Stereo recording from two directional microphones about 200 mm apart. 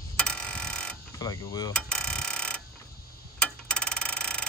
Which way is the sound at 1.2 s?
15° left (ahead or behind).